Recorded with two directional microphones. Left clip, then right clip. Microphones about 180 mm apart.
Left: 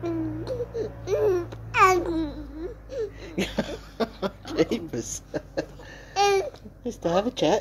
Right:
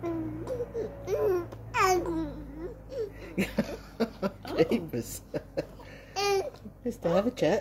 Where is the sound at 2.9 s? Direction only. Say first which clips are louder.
Left 4 dB; 10° right (ahead or behind).